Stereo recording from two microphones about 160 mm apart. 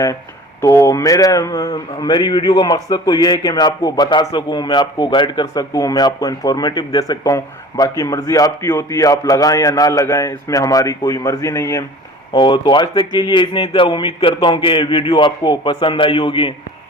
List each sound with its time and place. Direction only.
0.6 s a man's voice: 20° left (ahead or behind)
12.3 s a man's voice: 30° left (ahead or behind)